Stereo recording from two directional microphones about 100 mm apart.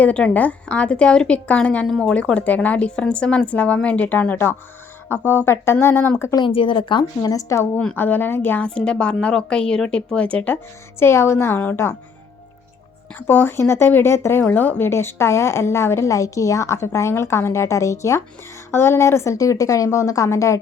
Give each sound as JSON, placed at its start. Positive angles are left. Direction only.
{"t": 0.0, "sound": "a woman's voice", "side_deg": 15}
{"t": 5.2, "sound": "speech", "side_deg": -20}
{"t": 5.5, "sound": "speech", "side_deg": 25}
{"t": 6.4, "sound": "speech", "side_deg": 60}
{"t": 7.2, "sound": "a woman's voice", "side_deg": 35}
{"t": 7.9, "sound": "a woman's voice", "side_deg": 20}
{"t": 13.1, "sound": "speech", "side_deg": 20}